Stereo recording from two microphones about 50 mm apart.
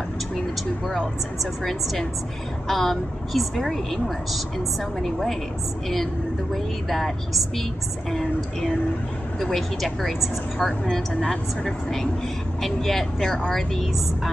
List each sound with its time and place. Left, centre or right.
1.4 s a woman's voice: centre
6.5 s a woman's voice: centre
11.1 s a woman's voice: centre